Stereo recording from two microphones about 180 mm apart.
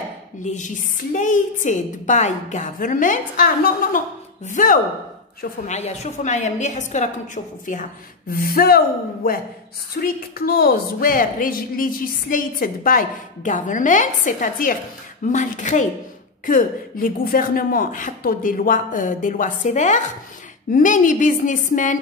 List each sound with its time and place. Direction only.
0.4 s a woman's voice: 45° left (ahead or behind)
5.7 s a woman's voice: 40° left (ahead or behind)
8.3 s a woman's voice: 55° left (ahead or behind)